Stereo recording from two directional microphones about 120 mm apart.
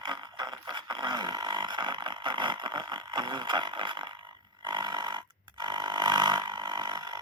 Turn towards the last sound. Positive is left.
turn(degrees=-35)  # may be behind; listen again after turning